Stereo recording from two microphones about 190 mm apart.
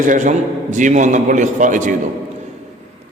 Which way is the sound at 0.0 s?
40° right (ahead or behind).